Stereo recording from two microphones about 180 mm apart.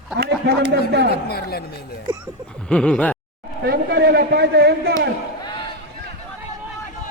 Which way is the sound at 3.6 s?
60° right (ahead or behind).